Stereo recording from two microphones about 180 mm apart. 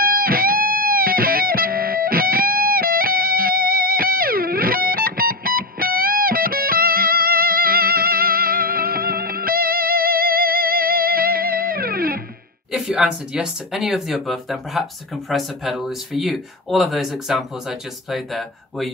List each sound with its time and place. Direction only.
0.0 s music: 55° right (ahead or behind)
12.7 s speech: 5° right (ahead or behind)